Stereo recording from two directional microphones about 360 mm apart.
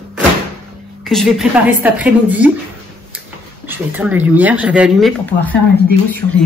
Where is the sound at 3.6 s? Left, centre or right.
Centre.